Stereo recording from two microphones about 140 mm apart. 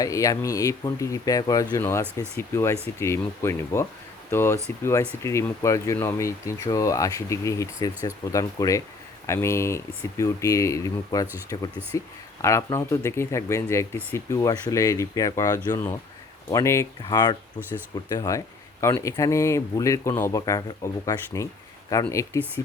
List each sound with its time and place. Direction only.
0.0 s speech: 25° left (ahead or behind)
17.1 s speech: 30° left (ahead or behind); by 22.6 s 15° left (ahead or behind)